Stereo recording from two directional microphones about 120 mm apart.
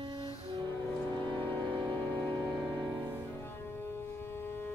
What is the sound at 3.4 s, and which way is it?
Music, 20° left (ahead or behind).